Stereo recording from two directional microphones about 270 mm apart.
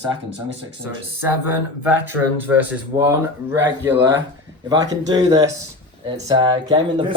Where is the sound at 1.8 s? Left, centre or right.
Centre.